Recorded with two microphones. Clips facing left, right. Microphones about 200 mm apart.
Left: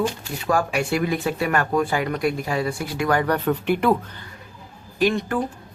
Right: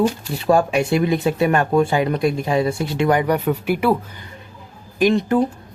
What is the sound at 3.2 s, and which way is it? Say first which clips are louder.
Speech: right 2 dB; 10° right (ahead or behind).